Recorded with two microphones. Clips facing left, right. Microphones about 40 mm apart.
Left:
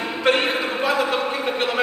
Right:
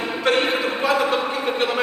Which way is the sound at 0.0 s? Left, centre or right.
Centre.